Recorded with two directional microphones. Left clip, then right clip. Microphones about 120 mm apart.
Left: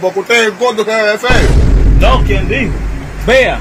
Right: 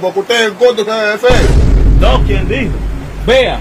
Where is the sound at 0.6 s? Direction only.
30° right (ahead or behind).